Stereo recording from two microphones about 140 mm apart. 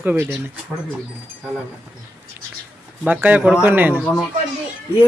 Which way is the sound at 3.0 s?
10° right (ahead or behind).